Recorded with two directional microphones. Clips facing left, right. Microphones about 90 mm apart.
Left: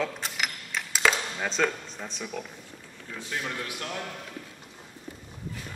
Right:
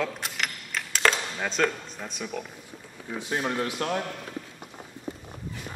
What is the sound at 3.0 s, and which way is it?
Speech, 25° right (ahead or behind).